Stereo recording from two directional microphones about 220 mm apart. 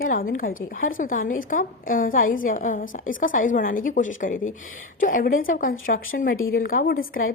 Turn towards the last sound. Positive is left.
turn(degrees=40)  # may be behind; listen again after turning